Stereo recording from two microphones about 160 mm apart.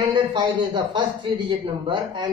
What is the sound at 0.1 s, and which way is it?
Speech, 30° right (ahead or behind).